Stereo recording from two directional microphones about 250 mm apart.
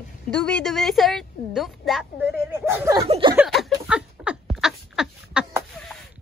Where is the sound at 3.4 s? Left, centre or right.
Centre.